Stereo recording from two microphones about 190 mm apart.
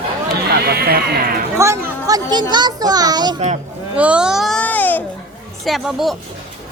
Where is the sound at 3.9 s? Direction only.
5° right (ahead or behind); by 5.0 s 10° left (ahead or behind).